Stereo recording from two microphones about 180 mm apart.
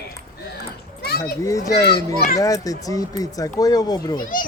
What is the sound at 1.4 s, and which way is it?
A child's voice, 20° left (ahead or behind).